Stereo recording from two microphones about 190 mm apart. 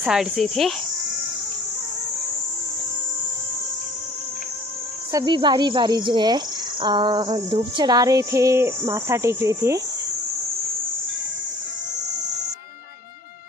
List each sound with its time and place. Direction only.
0.0 s speech: centre (ahead or behind)
5.1 s speech: 25° right (ahead or behind)